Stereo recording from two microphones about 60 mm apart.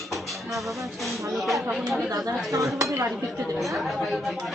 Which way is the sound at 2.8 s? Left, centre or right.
Right.